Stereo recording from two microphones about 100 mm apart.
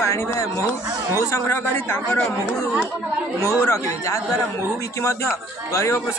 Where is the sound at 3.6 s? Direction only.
30° left (ahead or behind).